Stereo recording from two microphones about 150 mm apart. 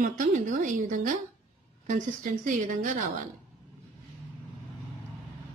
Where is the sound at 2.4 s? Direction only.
60° right (ahead or behind).